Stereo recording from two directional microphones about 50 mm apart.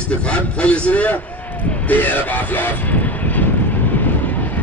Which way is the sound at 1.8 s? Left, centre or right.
Left.